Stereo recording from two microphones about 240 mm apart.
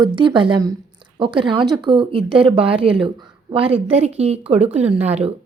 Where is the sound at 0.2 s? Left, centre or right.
Centre.